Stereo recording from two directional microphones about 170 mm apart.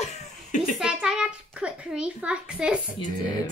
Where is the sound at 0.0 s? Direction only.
40° left (ahead or behind).